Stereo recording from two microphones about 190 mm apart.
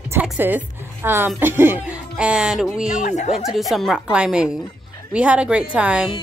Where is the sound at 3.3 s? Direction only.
Centre (ahead or behind).